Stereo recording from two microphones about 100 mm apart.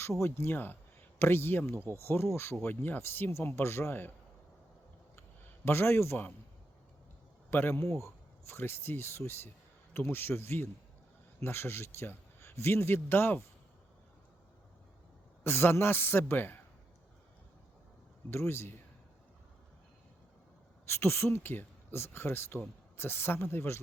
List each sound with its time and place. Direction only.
0.2 s speech: 25° left (ahead or behind)
5.6 s speech: 25° left (ahead or behind)
7.5 s speech: 20° left (ahead or behind)
15.4 s speech: 25° left (ahead or behind)
18.3 s speech: 25° left (ahead or behind)
20.8 s speech: 25° left (ahead or behind)